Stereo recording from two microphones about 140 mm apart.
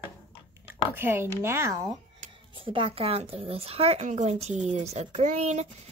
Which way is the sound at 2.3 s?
40° right (ahead or behind).